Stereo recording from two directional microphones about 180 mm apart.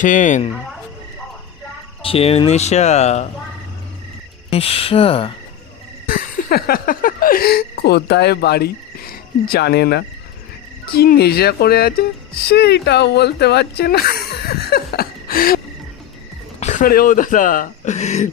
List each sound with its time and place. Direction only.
0.0 s speech: 45° left (ahead or behind)
2.0 s speech: 35° left (ahead or behind)
4.4 s speech: 35° left (ahead or behind)
6.1 s speech: 55° left (ahead or behind)
16.6 s speech: 40° left (ahead or behind)